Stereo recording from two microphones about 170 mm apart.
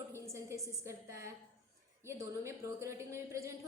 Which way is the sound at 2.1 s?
15° right (ahead or behind).